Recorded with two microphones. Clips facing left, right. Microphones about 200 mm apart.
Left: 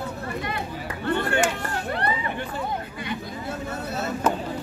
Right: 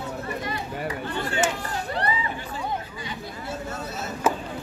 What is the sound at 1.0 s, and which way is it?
Chop, 60° left (ahead or behind).